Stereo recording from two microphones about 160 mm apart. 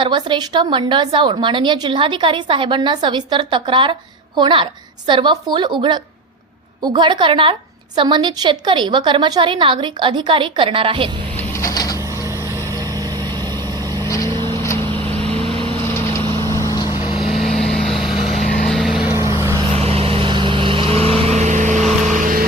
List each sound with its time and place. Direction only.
0.0 s a woman's voice: 30° right (ahead or behind)
11.3 s mechanisms: 20° left (ahead or behind)
11.9 s a sound: 20° right (ahead or behind)
12.4 s vehicle: 15° left (ahead or behind)
12.7 s vehicle: 25° right (ahead or behind)
14.5 s vehicle: 20° left (ahead or behind)
14.8 s vehicle: 35° right (ahead or behind)
16.4 s vehicle: 20° left (ahead or behind)
17.3 s vehicle: centre (ahead or behind)
18.3 s vehicle: 55° left (ahead or behind)
18.6 s vehicle: centre (ahead or behind)
19.1 s vehicle: 20° right (ahead or behind)
19.7 s vehicle: 40° right (ahead or behind); by 22.4 s 55° right (ahead or behind)